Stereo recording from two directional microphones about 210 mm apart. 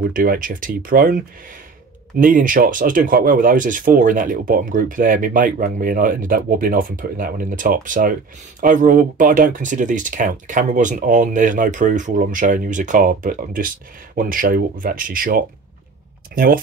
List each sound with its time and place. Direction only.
0.1 s speech: 40° right (ahead or behind)